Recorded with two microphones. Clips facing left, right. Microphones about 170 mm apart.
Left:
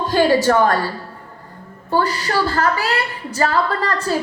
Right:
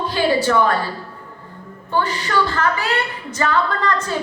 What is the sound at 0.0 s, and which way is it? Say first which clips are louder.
Speech: left 3 dB; 45° left (ahead or behind).